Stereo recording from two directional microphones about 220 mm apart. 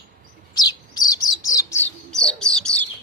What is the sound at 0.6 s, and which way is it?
Bird, 15° left (ahead or behind).